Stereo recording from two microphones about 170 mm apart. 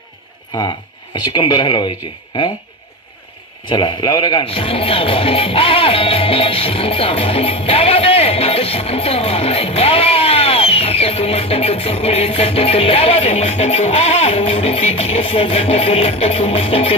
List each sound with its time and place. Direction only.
1.1 s speech: 30° left (ahead or behind)
3.7 s speech: 30° left (ahead or behind)